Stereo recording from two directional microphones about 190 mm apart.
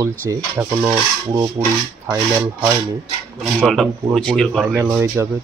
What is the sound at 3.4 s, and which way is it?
Speech, centre (ahead or behind).